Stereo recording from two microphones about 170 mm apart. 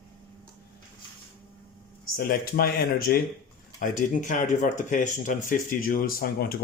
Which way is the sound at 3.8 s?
50° left (ahead or behind).